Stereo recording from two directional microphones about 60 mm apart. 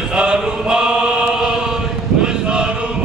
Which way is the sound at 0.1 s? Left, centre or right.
Centre.